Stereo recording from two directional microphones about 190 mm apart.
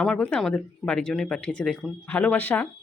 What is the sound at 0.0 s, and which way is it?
Speech, 5° left (ahead or behind).